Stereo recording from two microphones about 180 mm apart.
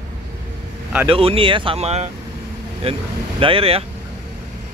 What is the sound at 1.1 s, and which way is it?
Speech, 30° right (ahead or behind).